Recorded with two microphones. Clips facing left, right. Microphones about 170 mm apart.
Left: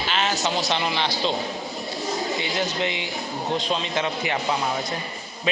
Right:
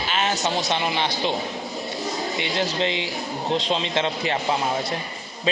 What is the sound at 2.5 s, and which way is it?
A man's voice, 25° right (ahead or behind).